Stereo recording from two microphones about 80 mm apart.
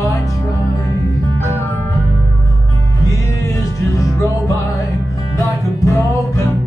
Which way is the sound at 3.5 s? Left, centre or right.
Left.